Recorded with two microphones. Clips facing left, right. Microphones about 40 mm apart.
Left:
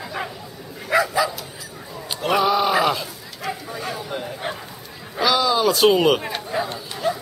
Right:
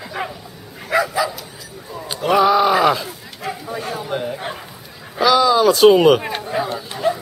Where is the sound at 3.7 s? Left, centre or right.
Centre.